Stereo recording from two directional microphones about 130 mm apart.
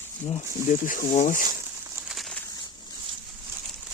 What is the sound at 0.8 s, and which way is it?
Speech, 85° left.